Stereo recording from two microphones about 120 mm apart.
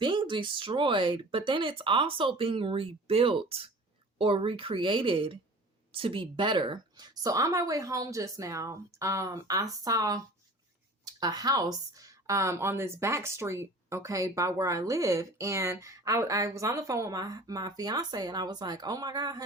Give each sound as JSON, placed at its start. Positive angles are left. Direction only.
{"t": 0.0, "sound": "speech", "side_deg": -40}